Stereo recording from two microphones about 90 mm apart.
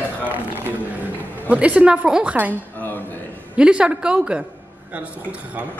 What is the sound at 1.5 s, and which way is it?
A man's voice, 15° right (ahead or behind).